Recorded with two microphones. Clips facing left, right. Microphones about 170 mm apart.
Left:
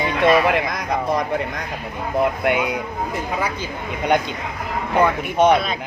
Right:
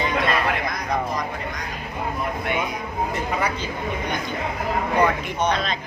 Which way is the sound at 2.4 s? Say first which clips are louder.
Left 6 dB; 85° left.